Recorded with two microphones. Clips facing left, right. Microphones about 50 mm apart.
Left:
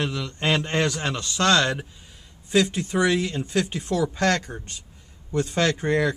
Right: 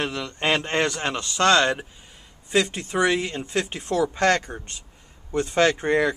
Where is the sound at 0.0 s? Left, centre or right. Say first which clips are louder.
Right 1 dB; right.